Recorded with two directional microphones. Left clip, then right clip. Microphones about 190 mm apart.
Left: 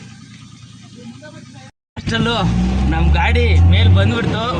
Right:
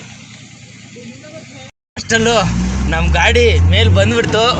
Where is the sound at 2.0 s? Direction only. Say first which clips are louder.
Right 6 dB; 10° right (ahead or behind).